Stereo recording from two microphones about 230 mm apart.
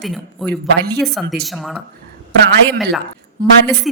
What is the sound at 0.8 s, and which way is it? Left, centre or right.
Speech, right.